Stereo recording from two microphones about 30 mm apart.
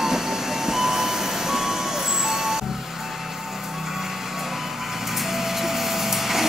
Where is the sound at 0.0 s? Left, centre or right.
Centre.